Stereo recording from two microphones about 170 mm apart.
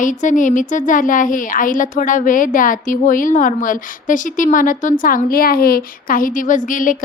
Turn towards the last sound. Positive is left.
turn(degrees=50)  # may be behind; listen again after turning